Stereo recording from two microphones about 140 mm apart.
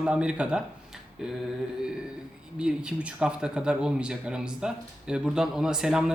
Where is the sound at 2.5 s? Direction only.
10° right (ahead or behind).